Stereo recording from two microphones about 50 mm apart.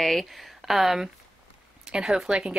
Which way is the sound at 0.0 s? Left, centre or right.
Centre.